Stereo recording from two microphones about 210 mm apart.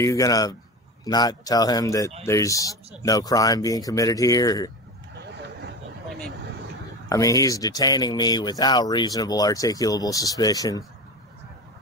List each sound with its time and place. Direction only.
0.0 s speech: 15° left (ahead or behind)
5.2 s a sound: 55° right (ahead or behind)
7.1 s speech: 15° left (ahead or behind)